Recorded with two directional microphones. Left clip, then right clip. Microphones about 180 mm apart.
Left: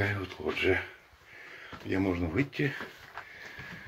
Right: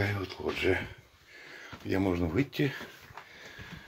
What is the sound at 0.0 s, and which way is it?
Speech, 20° right (ahead or behind).